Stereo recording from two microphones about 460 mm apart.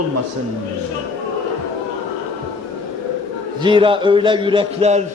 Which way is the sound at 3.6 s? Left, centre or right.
Centre.